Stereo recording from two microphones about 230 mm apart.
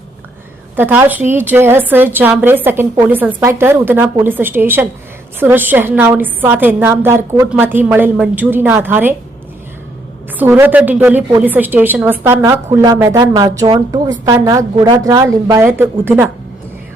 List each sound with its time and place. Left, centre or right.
0.8 s a woman's voice: centre
10.3 s a woman's voice: centre